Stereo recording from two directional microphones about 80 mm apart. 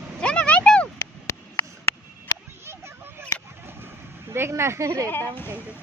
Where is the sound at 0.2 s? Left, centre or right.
Centre.